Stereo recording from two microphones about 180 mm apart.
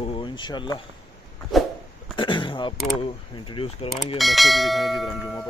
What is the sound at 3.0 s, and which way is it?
Mechanisms, 30° left (ahead or behind).